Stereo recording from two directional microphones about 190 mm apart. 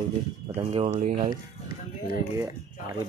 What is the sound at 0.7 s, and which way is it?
Speech, 30° right (ahead or behind).